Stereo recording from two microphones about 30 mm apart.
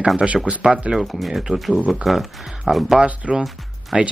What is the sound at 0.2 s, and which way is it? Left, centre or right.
Speech, centre.